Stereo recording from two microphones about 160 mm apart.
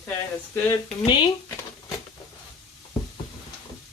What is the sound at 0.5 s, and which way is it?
Speech, 20° left (ahead or behind).